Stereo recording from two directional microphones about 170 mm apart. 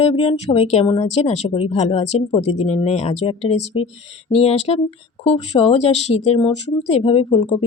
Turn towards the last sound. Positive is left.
turn(degrees=35)  # may be behind; listen again after turning